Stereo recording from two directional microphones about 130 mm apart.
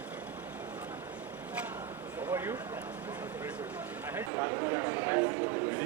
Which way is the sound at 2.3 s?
20° right (ahead or behind).